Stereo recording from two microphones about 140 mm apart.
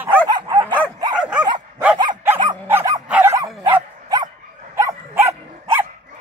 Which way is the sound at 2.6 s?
20° right (ahead or behind).